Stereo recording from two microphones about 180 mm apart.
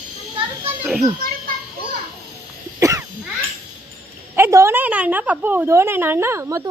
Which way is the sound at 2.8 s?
15° right (ahead or behind).